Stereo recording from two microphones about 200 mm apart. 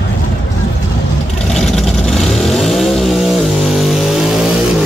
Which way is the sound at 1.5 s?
Centre (ahead or behind).